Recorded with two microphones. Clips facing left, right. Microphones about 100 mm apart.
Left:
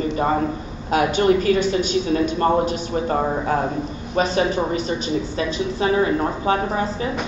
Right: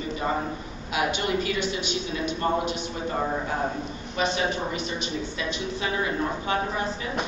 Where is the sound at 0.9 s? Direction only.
45° left (ahead or behind).